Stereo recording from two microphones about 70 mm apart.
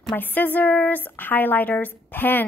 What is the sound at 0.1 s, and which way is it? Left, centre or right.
A woman's voice, left.